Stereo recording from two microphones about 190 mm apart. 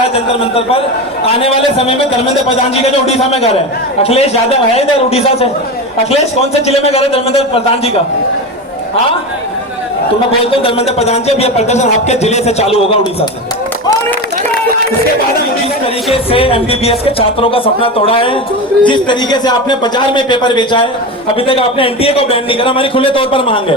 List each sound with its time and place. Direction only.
0.1 s speech: 30° left (ahead or behind)
3.1 s speech: 35° left (ahead or behind)
6.7 s speech: 35° left (ahead or behind)
10.4 s speech: 30° left (ahead or behind)
16.1 s speech: 30° left (ahead or behind)